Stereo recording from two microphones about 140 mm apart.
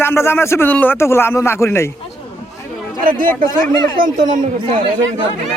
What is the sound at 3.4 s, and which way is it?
Speech, 30° left (ahead or behind).